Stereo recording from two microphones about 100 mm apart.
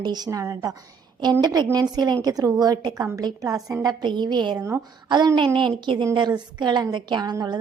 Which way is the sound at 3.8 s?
50° right (ahead or behind).